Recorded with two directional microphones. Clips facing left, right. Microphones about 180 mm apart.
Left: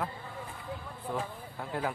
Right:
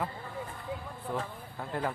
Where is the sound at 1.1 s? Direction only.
Centre (ahead or behind).